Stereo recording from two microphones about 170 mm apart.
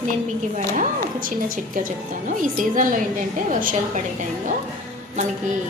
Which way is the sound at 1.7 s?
50° right (ahead or behind).